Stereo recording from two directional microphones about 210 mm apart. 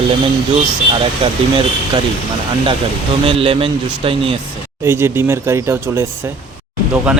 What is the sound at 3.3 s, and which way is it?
Speech, 25° right (ahead or behind).